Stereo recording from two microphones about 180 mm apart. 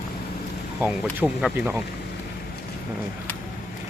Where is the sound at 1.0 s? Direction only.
5° left (ahead or behind).